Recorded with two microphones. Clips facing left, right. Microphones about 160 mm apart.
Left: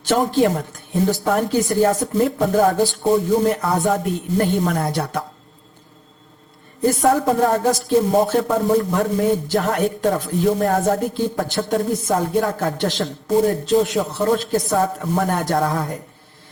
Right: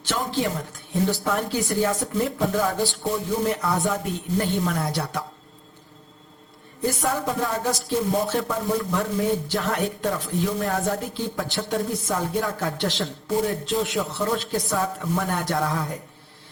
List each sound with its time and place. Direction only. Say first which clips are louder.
0.1 s speech: left 9 dB; 50° left (ahead or behind)
6.8 s speech: left 8 dB; 40° left (ahead or behind)